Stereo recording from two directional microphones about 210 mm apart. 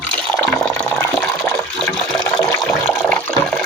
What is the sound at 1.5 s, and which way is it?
Toilet flush, 5° left (ahead or behind).